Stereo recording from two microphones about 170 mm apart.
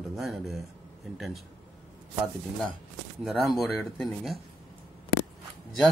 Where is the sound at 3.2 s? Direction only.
Centre (ahead or behind).